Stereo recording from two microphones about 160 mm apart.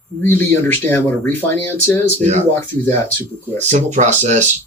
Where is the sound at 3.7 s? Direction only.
45° right (ahead or behind).